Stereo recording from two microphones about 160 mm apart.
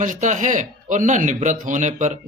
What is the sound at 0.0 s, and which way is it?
A man's voice, 50° right (ahead or behind).